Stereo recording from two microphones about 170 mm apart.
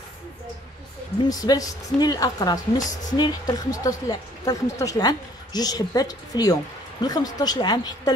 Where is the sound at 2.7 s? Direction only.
50° left (ahead or behind).